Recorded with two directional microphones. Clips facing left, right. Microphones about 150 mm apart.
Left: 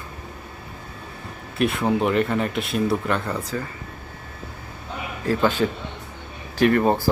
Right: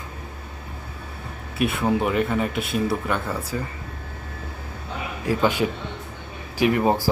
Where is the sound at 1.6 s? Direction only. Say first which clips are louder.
Left 1 dB; centre (ahead or behind).